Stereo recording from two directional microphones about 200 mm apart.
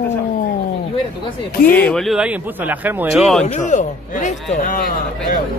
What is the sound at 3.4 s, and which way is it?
A man's voice, 35° left (ahead or behind).